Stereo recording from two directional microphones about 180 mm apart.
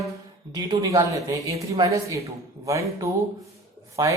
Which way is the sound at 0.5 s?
20° right (ahead or behind).